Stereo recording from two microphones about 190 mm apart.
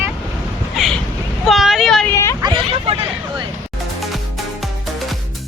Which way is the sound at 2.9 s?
35° right (ahead or behind).